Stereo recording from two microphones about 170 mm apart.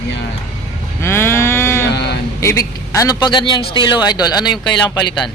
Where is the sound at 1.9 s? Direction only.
75° left (ahead or behind).